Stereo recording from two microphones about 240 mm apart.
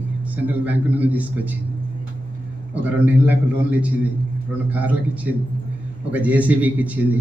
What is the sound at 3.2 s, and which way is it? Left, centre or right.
A man's voice, centre.